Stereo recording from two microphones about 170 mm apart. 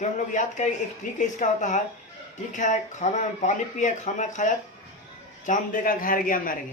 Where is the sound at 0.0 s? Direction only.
45° left (ahead or behind).